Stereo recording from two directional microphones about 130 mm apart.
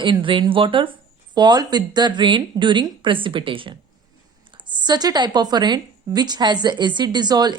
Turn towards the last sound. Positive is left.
turn(degrees=-30)  # may be behind; listen again after turning